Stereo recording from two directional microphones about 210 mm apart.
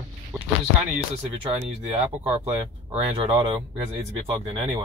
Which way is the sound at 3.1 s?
25° right (ahead or behind).